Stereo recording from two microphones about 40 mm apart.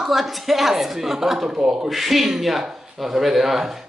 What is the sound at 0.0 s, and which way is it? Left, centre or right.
Speech, centre.